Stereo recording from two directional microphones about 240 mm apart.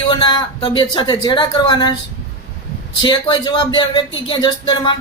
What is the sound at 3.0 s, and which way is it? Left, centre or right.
Speech, centre.